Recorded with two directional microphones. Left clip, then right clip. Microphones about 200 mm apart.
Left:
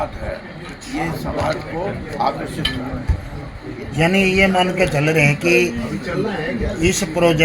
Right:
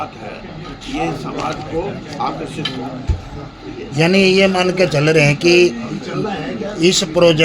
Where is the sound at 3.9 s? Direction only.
60° right (ahead or behind).